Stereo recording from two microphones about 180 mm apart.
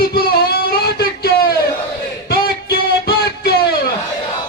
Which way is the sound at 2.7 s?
60° left (ahead or behind).